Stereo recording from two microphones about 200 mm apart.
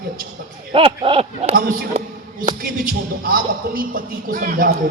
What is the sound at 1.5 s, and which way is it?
Speech, 45° right (ahead or behind).